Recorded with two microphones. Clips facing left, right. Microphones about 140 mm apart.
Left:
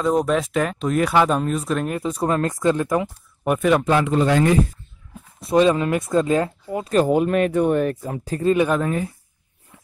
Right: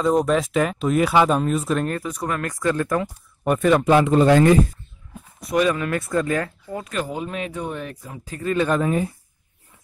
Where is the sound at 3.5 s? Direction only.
5° left (ahead or behind).